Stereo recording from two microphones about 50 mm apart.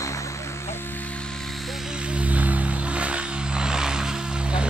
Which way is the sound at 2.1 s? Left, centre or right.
Right.